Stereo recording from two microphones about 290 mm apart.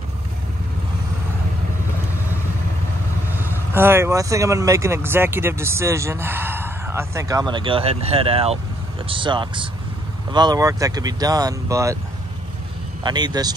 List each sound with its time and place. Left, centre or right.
3.7 s speech: centre
13.0 s speech: centre